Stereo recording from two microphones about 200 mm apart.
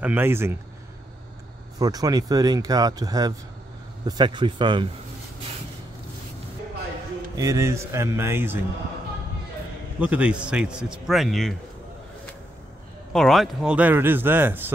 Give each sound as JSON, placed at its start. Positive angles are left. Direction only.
{"t": 0.0, "sound": "speech", "side_deg": -10}
{"t": 1.8, "sound": "speech", "side_deg": -20}
{"t": 7.3, "sound": "speech", "side_deg": -15}
{"t": 9.9, "sound": "a man's voice", "side_deg": -5}
{"t": 13.1, "sound": "speech", "side_deg": 0}